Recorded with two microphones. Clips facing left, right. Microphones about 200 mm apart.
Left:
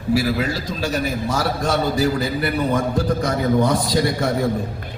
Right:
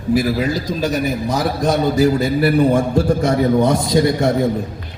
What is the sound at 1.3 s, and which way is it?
A man's voice, 20° right (ahead or behind).